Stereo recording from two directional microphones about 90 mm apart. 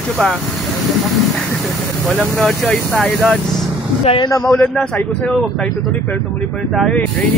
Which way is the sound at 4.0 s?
90° left.